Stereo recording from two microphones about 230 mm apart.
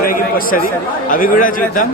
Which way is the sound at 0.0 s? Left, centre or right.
Left.